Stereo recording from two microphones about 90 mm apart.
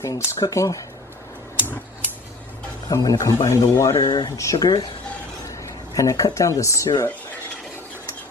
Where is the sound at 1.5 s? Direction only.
25° left (ahead or behind).